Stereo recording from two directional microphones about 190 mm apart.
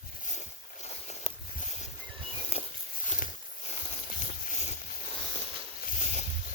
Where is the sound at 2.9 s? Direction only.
45° left (ahead or behind).